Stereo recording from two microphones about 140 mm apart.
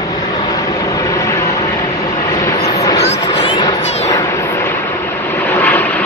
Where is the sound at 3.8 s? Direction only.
50° left (ahead or behind).